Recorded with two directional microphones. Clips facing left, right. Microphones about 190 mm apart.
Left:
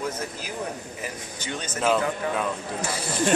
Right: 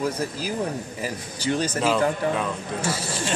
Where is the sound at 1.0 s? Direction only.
35° right (ahead or behind).